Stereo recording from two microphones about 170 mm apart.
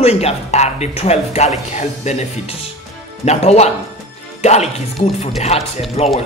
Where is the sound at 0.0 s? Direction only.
35° left (ahead or behind).